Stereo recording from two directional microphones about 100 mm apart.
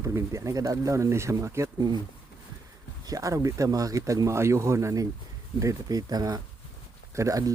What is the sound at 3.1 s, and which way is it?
Speech, 35° right (ahead or behind).